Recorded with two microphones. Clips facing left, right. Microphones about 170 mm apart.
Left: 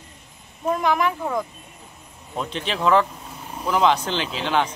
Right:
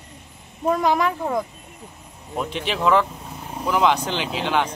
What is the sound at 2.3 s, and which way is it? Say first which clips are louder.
Speech: right 1 dB; 15° right (ahead or behind).